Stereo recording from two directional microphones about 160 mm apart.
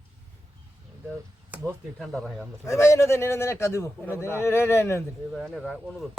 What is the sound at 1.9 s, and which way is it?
Speech, centre (ahead or behind).